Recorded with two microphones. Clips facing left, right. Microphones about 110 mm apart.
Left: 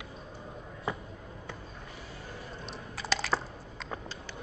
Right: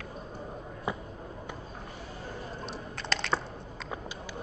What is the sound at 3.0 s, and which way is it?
Typing, 5° left (ahead or behind).